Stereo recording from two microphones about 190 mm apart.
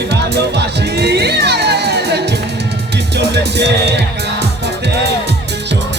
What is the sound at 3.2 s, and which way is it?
Music, 65° right (ahead or behind).